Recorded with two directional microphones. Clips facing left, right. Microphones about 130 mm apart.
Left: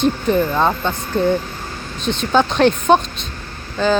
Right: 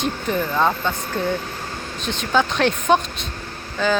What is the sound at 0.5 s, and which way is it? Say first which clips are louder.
Speech: left 2 dB; 20° left (ahead or behind).